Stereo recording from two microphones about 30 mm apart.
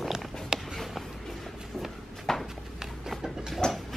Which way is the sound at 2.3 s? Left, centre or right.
Centre.